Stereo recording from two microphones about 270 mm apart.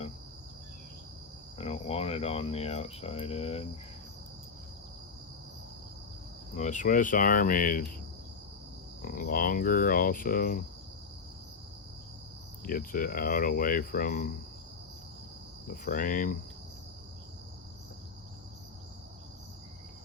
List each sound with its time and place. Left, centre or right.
1.5 s speech: left
6.6 s speech: left
9.0 s speech: left
12.6 s speech: left
15.6 s speech: left